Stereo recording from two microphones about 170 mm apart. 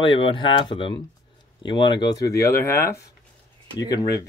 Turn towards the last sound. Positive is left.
turn(degrees=20)  # may be behind; listen again after turning